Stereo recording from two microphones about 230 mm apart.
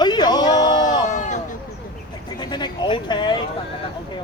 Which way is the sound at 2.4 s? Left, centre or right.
Centre.